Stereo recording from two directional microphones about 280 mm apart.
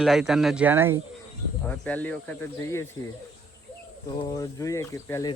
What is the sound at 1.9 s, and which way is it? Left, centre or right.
Speech, centre.